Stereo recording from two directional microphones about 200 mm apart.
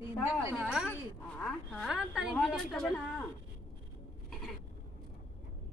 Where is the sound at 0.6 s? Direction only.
5° right (ahead or behind).